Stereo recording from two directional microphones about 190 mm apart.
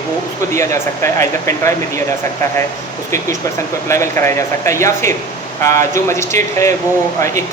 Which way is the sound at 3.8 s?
15° left (ahead or behind).